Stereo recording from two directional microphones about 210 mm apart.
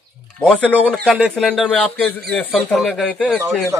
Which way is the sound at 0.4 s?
5° left (ahead or behind).